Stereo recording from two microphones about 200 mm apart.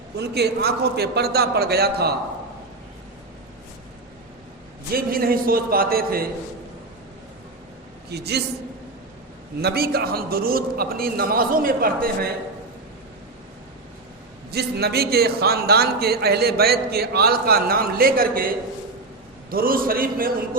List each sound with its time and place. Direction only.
0.2 s a man's voice: 55° right (ahead or behind)
4.9 s a man's voice: 50° right (ahead or behind)
8.1 s a man's voice: 55° right (ahead or behind)
9.6 s a man's voice: 50° right (ahead or behind)
14.5 s a man's voice: 55° right (ahead or behind)